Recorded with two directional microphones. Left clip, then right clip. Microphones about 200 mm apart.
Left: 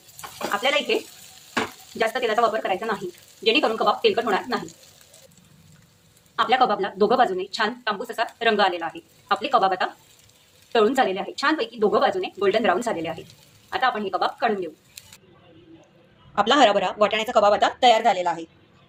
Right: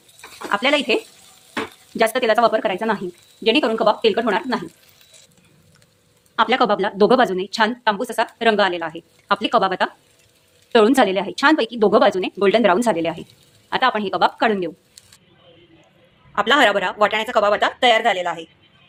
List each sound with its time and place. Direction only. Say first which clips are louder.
0.5 s speech: right 4 dB; 55° right (ahead or behind)
2.0 s a woman's voice: right 5 dB; 55° right (ahead or behind)
6.3 s a woman's voice: right 3 dB; 45° right (ahead or behind)
16.3 s a woman's voice: right 2 dB; centre (ahead or behind)